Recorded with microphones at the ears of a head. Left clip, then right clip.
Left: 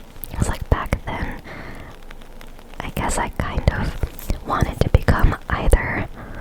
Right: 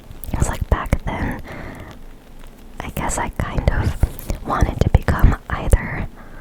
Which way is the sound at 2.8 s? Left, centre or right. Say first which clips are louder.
Even; centre.